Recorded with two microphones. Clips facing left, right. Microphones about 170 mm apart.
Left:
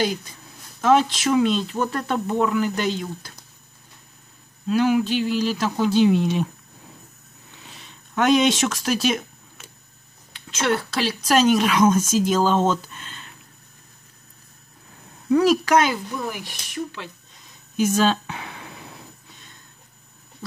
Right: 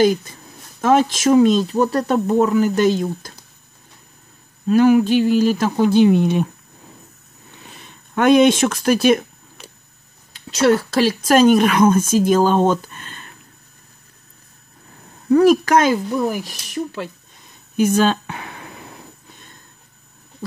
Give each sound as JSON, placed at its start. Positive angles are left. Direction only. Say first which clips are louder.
{"t": 0.0, "sound": "speech", "louder": "right 9 dB", "side_deg": -50}
{"t": 4.6, "sound": "speech", "louder": "right 6 dB", "side_deg": -45}
{"t": 7.7, "sound": "speech", "louder": "right 4 dB", "side_deg": -55}
{"t": 10.3, "sound": "speech", "louder": "right 8 dB", "side_deg": -40}
{"t": 15.3, "sound": "speech", "louder": "right 4 dB", "side_deg": -50}
{"t": 17.7, "sound": "speech", "louder": "right 4 dB", "side_deg": -55}